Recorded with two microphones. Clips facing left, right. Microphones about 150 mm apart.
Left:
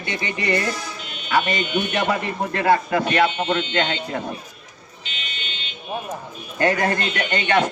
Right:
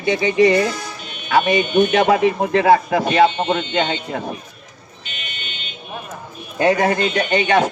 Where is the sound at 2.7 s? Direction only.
15° right (ahead or behind).